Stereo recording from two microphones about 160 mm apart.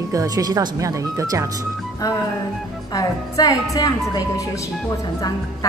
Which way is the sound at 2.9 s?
25° left (ahead or behind).